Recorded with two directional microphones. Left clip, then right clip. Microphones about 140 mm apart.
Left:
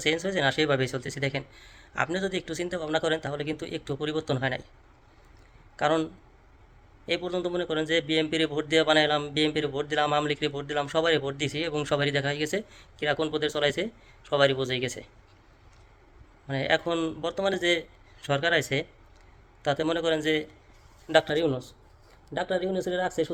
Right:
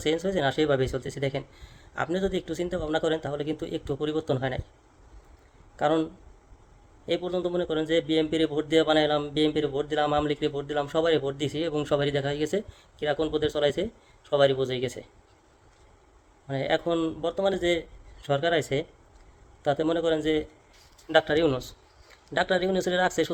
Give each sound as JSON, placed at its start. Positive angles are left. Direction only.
{"t": 0.0, "sound": "a man's voice", "side_deg": -15}
{"t": 5.7, "sound": "a man's voice", "side_deg": -15}
{"t": 16.5, "sound": "a man's voice", "side_deg": -15}